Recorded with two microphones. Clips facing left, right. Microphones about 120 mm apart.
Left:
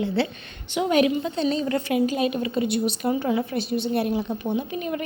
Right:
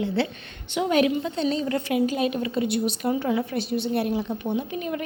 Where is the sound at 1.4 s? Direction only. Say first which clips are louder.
Left 1 dB; 35° left (ahead or behind).